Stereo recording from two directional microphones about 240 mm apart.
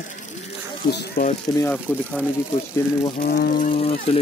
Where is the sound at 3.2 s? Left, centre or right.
Left.